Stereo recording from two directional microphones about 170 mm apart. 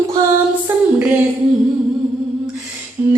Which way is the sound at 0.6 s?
10° right (ahead or behind).